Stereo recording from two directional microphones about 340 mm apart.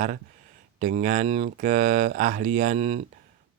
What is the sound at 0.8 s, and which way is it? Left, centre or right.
Speech, right.